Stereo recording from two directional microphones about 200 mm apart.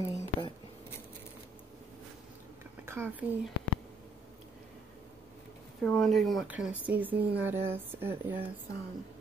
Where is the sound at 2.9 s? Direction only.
10° right (ahead or behind).